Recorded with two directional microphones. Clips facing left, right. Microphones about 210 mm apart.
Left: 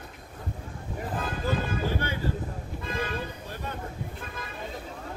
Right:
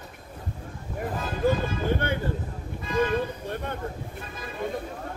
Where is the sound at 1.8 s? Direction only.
55° right (ahead or behind).